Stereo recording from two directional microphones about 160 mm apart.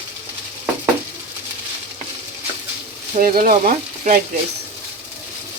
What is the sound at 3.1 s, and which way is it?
Speech, 60° right (ahead or behind).